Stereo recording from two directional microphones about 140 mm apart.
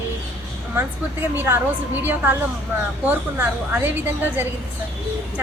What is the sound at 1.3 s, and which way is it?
A woman's voice, 15° right (ahead or behind).